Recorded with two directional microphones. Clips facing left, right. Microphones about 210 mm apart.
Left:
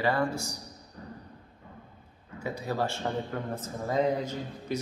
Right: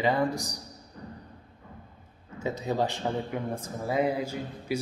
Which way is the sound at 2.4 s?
20° right (ahead or behind).